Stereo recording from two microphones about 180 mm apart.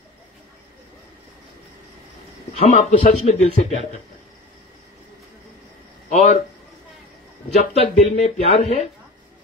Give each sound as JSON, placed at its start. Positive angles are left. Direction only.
{"t": 2.6, "sound": "speech", "side_deg": 40}
{"t": 6.0, "sound": "speech", "side_deg": 40}
{"t": 7.5, "sound": "speech", "side_deg": 35}